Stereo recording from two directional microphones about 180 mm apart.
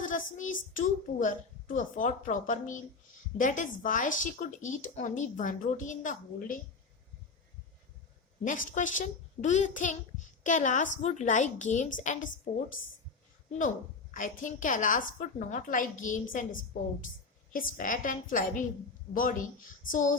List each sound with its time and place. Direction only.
0.0 s a child's voice: 45° left (ahead or behind)
8.4 s a child's voice: 45° left (ahead or behind)
13.6 s a child's voice: 45° left (ahead or behind)